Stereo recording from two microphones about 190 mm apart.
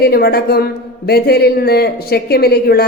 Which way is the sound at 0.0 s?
55° left (ahead or behind).